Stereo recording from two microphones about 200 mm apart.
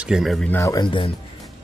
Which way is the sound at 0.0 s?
Centre (ahead or behind).